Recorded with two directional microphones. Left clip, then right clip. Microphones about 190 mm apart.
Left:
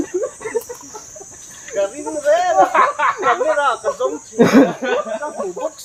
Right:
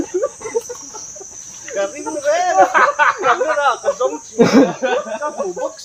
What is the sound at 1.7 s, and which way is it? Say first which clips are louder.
Snake: left 1 dB; 25° left (ahead or behind).